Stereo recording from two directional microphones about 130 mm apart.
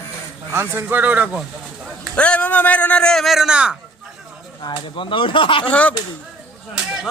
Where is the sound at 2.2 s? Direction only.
10° left (ahead or behind); by 3.8 s 5° right (ahead or behind).